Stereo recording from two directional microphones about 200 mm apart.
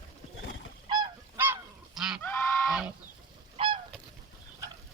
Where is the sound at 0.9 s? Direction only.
20° right (ahead or behind).